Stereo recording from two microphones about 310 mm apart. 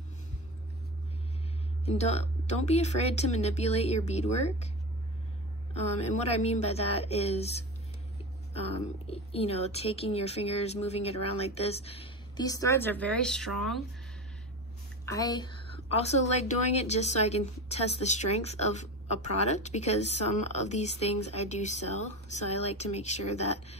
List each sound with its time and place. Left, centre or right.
1.9 s a woman's voice: left
5.8 s a woman's voice: centre
15.0 s a woman's voice: centre